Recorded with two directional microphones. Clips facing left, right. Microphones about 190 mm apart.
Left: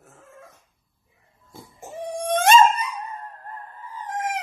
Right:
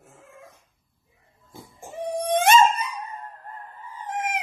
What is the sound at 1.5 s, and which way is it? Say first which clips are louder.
Dog: even; 15° right (ahead or behind).